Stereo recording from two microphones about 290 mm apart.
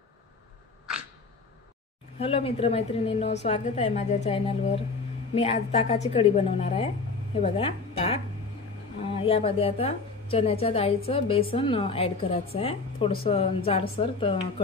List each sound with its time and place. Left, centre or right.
2.1 s a woman's voice: centre
9.2 s a woman's voice: centre